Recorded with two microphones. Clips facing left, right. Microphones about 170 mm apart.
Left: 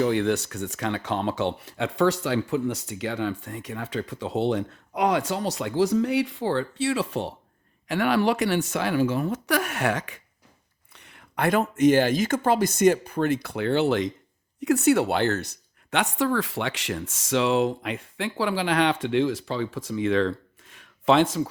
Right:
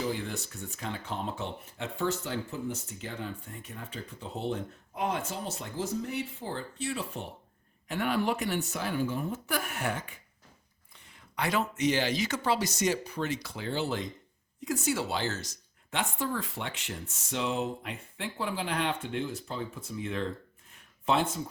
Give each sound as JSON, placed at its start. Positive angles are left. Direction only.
{"t": 0.0, "sound": "speech", "side_deg": 75}
{"t": 10.9, "sound": "speech", "side_deg": 70}
{"t": 14.6, "sound": "speech", "side_deg": 70}